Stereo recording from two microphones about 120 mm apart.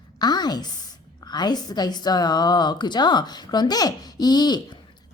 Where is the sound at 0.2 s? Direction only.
35° left (ahead or behind).